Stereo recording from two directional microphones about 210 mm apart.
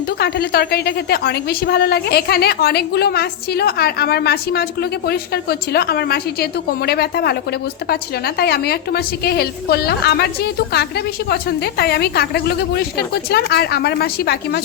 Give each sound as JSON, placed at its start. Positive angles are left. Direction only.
{"t": 0.2, "sound": "a woman's voice", "side_deg": 50}